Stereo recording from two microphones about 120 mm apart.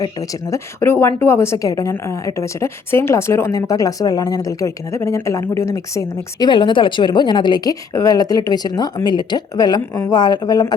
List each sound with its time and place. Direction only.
0.0 s speech: 30° left (ahead or behind)
6.5 s speech: 40° left (ahead or behind)